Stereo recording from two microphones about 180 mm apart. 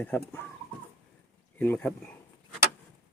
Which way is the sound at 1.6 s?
10° left (ahead or behind).